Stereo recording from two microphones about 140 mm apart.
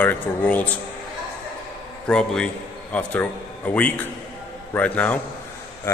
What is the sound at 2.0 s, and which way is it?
A man's voice, 5° left (ahead or behind).